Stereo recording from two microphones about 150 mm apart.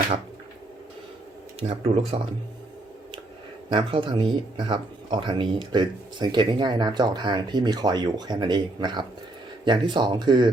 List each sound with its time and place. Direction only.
1.5 s speech: 45° right (ahead or behind)
3.7 s speech: 35° right (ahead or behind)